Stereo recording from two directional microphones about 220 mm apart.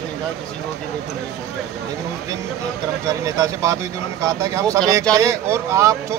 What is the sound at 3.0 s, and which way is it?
Speech, 15° right (ahead or behind).